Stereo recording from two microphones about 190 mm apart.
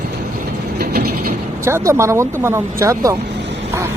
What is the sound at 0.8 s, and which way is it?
Vehicle, 55° right (ahead or behind).